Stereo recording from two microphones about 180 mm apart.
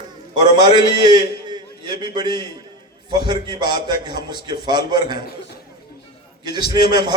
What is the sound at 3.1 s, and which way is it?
A man's voice, 25° right (ahead or behind).